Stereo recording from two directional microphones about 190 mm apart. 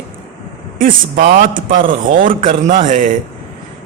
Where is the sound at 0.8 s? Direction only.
45° right (ahead or behind).